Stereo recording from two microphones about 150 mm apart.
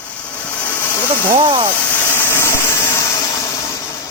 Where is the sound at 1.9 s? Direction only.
15° left (ahead or behind).